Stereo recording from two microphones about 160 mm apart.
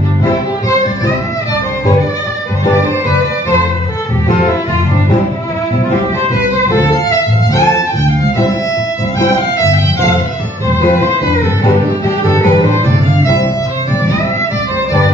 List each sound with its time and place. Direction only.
0.2 s music: 20° left (ahead or behind)
6.7 s music: 20° left (ahead or behind)